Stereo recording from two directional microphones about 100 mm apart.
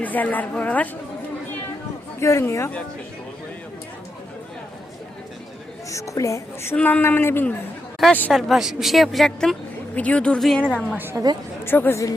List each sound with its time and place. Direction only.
0.0 s speech: 15° left (ahead or behind)
2.2 s a woman's voice: 30° left (ahead or behind)
5.9 s a woman's voice: 30° left (ahead or behind)
6.7 s speech: 15° left (ahead or behind)
8.3 s a woman's voice: centre (ahead or behind)
9.9 s speech: 15° left (ahead or behind)
10.9 s a woman's voice: 20° right (ahead or behind)
11.6 s a woman's voice: 25° left (ahead or behind)